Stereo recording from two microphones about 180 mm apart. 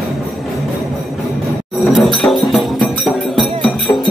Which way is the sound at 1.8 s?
Centre (ahead or behind).